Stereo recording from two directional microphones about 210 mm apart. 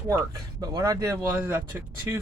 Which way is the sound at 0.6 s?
15° right (ahead or behind).